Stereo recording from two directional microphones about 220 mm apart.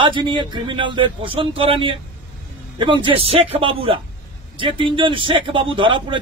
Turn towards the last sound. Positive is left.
turn(degrees=-20)  # may be behind; listen again after turning